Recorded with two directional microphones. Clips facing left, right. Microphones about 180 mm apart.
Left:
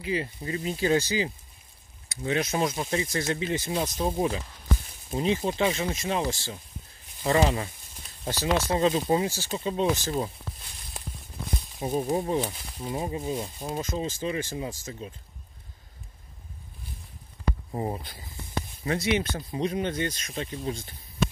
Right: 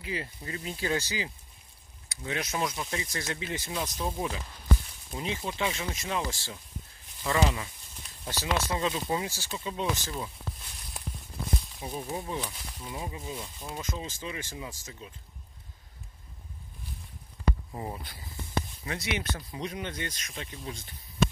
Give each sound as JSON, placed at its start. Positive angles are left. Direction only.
{"t": 0.0, "sound": "speech", "side_deg": 20}
{"t": 11.8, "sound": "speech", "side_deg": 40}
{"t": 17.6, "sound": "speech", "side_deg": 30}